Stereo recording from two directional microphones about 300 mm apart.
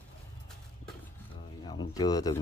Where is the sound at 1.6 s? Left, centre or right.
Centre.